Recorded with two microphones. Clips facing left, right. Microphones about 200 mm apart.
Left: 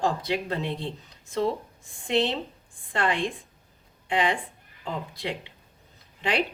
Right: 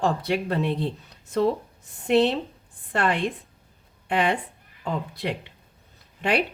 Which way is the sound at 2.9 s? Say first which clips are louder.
Right 2 dB; 60° right (ahead or behind).